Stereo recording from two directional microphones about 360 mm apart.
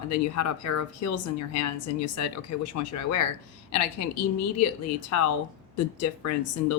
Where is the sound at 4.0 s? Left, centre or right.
Left.